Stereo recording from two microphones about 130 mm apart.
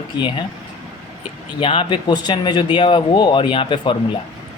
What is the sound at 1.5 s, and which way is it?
Speech, 40° left (ahead or behind).